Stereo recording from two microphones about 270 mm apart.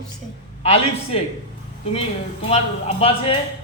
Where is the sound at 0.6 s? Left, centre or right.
Left.